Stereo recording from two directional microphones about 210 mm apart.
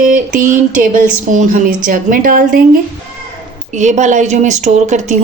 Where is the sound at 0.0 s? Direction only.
40° right (ahead or behind).